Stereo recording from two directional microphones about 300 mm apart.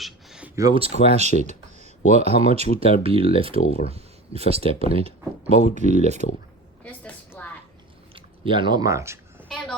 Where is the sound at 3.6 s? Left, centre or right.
Left.